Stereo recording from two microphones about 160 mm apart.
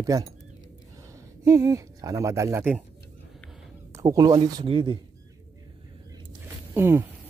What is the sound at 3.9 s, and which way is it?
Speech, 20° right (ahead or behind).